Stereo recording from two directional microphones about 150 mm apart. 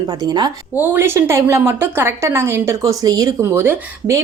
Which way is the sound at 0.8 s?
15° right (ahead or behind).